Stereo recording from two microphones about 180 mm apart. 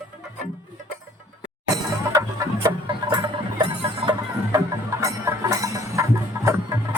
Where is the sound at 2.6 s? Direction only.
25° right (ahead or behind).